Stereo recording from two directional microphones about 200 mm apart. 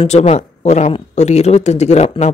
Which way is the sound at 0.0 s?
35° left (ahead or behind).